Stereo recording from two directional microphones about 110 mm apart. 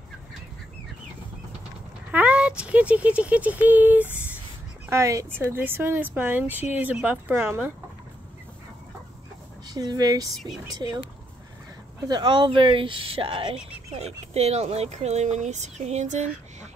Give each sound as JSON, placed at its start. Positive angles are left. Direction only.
{"t": 2.0, "sound": "speech", "side_deg": -10}
{"t": 9.7, "sound": "speech", "side_deg": -35}
{"t": 12.1, "sound": "speech", "side_deg": -45}
{"t": 14.3, "sound": "speech", "side_deg": -75}